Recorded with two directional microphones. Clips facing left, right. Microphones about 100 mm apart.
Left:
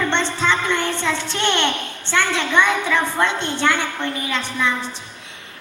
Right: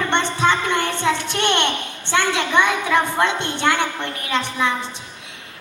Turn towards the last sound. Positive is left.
turn(degrees=-20)  # may be behind; listen again after turning